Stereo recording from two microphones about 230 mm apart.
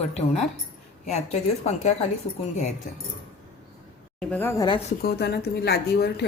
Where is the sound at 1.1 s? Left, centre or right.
Left.